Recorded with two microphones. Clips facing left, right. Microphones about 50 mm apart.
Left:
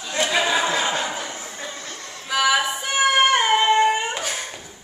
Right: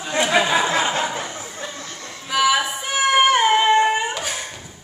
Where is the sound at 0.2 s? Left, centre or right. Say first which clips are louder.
Right 2 dB; centre.